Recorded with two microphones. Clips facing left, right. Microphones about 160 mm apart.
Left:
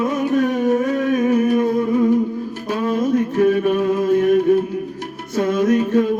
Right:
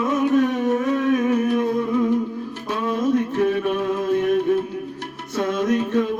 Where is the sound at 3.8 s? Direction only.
45° left (ahead or behind).